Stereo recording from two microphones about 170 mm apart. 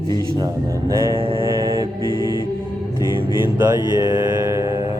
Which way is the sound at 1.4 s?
20° right (ahead or behind).